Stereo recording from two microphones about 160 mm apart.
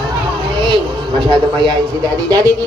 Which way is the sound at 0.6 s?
30° right (ahead or behind).